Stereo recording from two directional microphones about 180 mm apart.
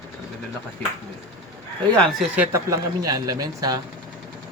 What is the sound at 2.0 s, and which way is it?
A man's voice, 5° right (ahead or behind).